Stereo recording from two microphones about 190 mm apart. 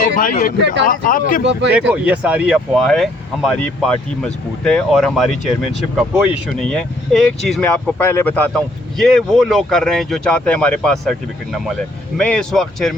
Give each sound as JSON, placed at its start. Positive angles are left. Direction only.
{"t": 0.2, "sound": "speech", "side_deg": 45}
{"t": 0.6, "sound": "speech", "side_deg": -70}
{"t": 0.9, "sound": "speech", "side_deg": 45}
{"t": 1.9, "sound": "speech", "side_deg": -5}